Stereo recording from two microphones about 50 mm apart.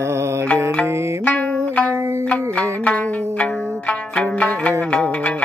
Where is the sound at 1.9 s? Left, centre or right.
Right.